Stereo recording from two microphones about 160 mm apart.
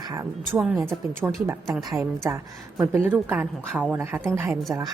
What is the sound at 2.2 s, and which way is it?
A woman's voice, 20° right (ahead or behind).